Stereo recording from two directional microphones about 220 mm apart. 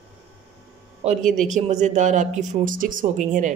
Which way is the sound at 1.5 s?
35° right (ahead or behind).